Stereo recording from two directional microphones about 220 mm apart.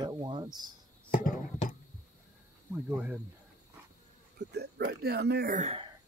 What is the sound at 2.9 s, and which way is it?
Speech, 5° right (ahead or behind).